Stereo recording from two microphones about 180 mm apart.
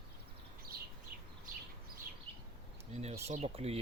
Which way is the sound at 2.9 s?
40° right (ahead or behind).